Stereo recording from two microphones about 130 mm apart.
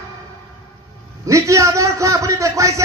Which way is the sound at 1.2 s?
25° right (ahead or behind).